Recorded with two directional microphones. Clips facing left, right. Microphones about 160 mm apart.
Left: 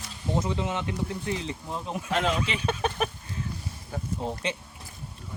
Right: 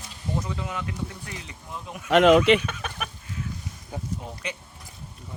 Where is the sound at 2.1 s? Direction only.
70° right (ahead or behind).